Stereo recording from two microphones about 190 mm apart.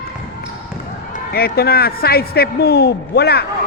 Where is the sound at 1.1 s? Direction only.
55° left (ahead or behind).